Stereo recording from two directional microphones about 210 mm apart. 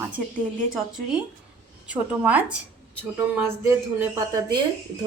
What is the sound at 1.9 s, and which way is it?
A woman's voice, 5° right (ahead or behind).